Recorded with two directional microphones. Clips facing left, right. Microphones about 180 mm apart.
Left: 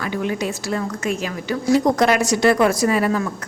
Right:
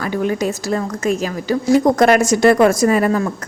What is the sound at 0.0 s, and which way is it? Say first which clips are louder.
Speech: right 4 dB; 40° right (ahead or behind).